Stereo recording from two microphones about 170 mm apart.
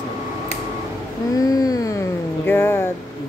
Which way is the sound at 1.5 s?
20° left (ahead or behind).